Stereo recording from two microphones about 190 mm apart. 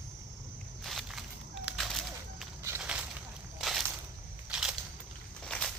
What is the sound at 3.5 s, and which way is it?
Crushing, centre (ahead or behind).